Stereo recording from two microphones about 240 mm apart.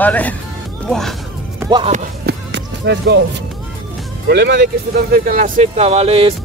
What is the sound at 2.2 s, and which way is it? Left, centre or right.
Music, right.